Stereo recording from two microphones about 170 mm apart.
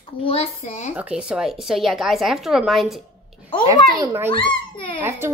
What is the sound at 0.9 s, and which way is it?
A woman's voice, 5° right (ahead or behind).